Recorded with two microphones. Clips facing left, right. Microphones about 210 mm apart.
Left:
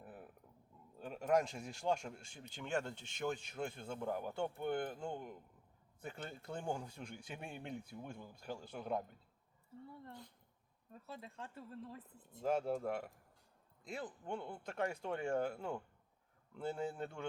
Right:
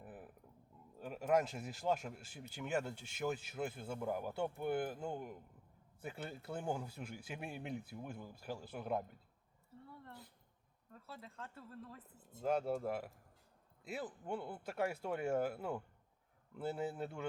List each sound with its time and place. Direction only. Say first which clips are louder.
0.0 s a sound: right 1 dB; centre (ahead or behind)
0.9 s speech: even; 5° right (ahead or behind)
10.9 s speech: left 2 dB; 20° left (ahead or behind)
12.4 s speech: even; centre (ahead or behind)